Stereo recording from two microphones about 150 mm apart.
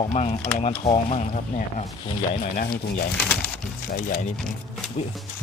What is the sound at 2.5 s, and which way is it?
Speech, 65° left (ahead or behind).